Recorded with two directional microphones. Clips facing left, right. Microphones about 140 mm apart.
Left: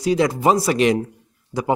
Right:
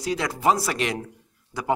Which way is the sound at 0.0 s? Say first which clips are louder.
Left 6 dB; 20° left (ahead or behind).